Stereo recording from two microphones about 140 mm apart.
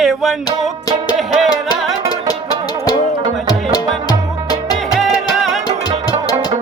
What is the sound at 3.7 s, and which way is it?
Music, 30° left (ahead or behind).